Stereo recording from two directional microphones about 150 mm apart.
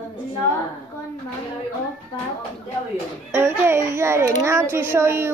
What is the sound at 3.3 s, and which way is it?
A woman's voice, 15° right (ahead or behind).